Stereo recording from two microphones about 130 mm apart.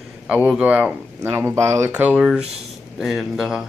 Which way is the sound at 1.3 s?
20° right (ahead or behind).